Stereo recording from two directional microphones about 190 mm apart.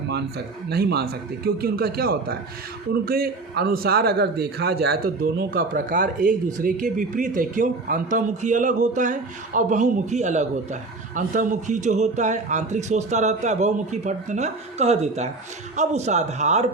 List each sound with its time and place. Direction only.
0.1 s a man's voice: 60° right (ahead or behind)
5.5 s speech: 45° right (ahead or behind)